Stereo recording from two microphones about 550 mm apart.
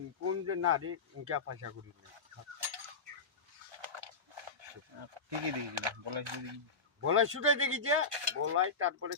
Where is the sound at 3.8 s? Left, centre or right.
Right.